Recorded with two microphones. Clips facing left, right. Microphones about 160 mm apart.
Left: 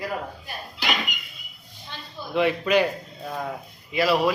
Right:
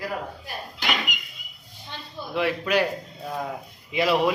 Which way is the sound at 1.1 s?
90° right.